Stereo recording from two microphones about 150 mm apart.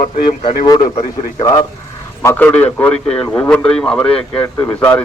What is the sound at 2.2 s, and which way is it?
A man's voice, 10° left (ahead or behind).